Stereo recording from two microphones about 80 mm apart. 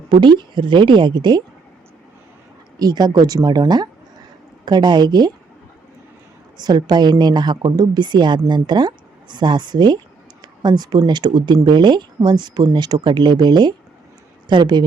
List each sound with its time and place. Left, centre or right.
0.1 s speech: right
2.7 s a woman's voice: right
6.6 s a woman's voice: right